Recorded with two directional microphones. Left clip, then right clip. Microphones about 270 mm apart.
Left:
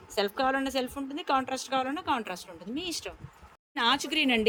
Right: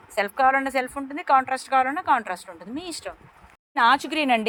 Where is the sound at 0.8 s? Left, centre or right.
Right.